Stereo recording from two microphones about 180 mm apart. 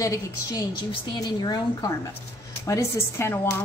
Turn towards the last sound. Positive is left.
turn(degrees=15)  # may be behind; listen again after turning